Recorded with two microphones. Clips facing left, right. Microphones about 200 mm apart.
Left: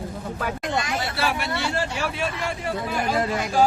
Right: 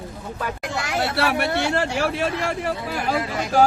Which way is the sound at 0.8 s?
70° right (ahead or behind).